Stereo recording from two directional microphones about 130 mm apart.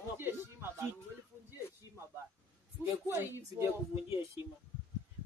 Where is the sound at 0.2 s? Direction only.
15° right (ahead or behind).